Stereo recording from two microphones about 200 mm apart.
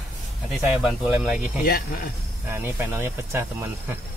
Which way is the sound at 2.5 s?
10° right (ahead or behind).